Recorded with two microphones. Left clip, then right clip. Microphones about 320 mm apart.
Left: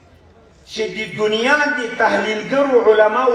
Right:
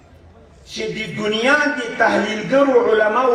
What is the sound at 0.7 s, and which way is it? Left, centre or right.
A man's voice, centre.